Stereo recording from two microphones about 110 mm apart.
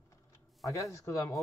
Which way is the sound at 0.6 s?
30° left (ahead or behind).